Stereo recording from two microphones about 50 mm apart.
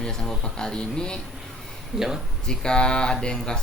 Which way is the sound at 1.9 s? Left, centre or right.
Centre.